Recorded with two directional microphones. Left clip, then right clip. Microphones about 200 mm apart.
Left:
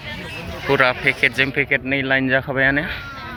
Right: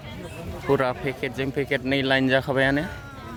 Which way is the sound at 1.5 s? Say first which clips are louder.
Left 5 dB; 30° right (ahead or behind).